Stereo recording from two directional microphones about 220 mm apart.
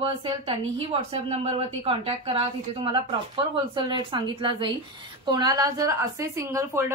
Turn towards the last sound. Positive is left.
turn(degrees=-10)  # may be behind; listen again after turning